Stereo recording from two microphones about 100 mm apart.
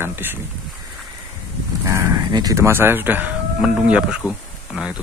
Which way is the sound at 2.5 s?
25° right (ahead or behind).